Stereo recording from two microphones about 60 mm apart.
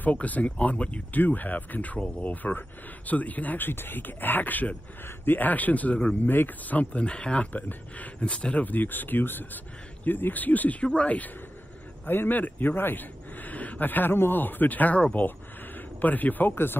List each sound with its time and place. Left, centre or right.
0.0 s speech: left